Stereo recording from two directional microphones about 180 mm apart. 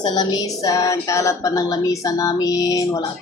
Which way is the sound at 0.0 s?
20° left (ahead or behind).